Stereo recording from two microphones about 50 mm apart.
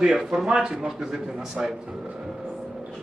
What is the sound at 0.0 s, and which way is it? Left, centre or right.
A man's voice, centre.